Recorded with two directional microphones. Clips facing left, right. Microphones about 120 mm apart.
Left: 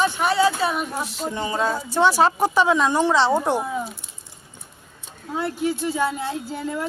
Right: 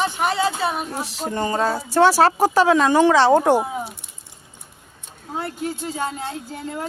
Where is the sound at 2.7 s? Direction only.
80° right.